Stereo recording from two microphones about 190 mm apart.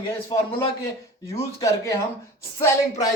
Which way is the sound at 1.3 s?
15° left (ahead or behind).